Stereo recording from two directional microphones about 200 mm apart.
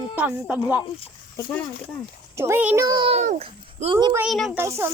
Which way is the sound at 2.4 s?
10° right (ahead or behind).